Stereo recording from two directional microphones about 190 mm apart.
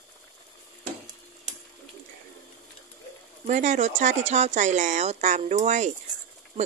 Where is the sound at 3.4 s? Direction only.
40° right (ahead or behind).